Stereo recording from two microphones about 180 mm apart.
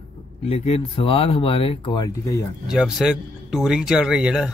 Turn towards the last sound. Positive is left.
turn(degrees=-5)  # may be behind; listen again after turning